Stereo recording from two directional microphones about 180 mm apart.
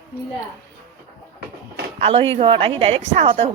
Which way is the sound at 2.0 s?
35° right (ahead or behind).